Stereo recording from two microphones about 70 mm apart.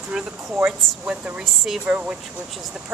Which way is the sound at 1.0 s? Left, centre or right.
Right.